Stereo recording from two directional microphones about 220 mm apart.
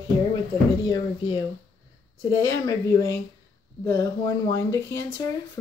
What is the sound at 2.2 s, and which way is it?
Speech, 15° left (ahead or behind).